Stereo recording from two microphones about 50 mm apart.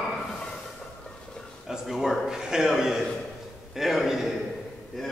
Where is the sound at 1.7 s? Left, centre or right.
Centre.